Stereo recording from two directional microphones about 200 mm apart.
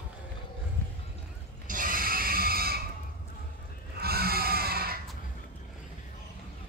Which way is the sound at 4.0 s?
50° right (ahead or behind).